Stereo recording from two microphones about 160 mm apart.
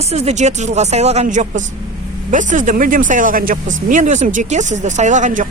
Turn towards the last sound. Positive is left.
turn(degrees=-50)  # may be behind; listen again after turning